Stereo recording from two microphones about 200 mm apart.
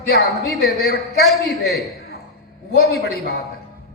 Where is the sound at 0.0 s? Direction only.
55° left (ahead or behind).